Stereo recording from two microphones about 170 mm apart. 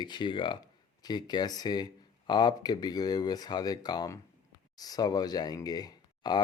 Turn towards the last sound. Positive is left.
turn(degrees=25)  # may be behind; listen again after turning